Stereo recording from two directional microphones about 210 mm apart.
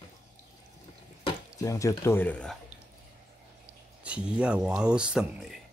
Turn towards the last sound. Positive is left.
turn(degrees=-5)  # may be behind; listen again after turning